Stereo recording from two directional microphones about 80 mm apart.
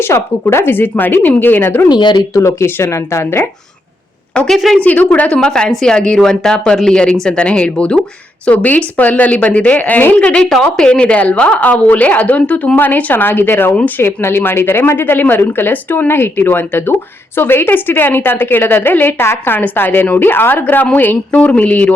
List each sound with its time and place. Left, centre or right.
0.0 s a woman's voice: left
1.9 s speech: left
2.3 s speech: left
4.4 s a woman's voice: centre
4.8 s a woman's voice: left